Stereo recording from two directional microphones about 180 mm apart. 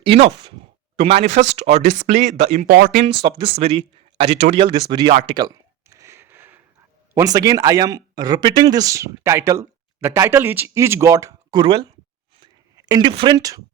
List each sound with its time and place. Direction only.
0.0 s speech: 35° right (ahead or behind)
2.6 s speech: 55° right (ahead or behind)
3.0 s speech: 30° right (ahead or behind)
5.3 s a sound: 20° right (ahead or behind)
7.1 s speech: 20° right (ahead or behind)
12.4 s a sound: 20° right (ahead or behind)